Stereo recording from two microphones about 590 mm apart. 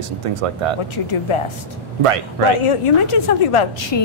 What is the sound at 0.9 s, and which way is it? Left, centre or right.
Speech, left.